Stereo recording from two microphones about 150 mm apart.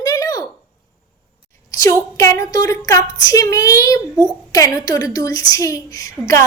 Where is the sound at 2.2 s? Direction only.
20° left (ahead or behind).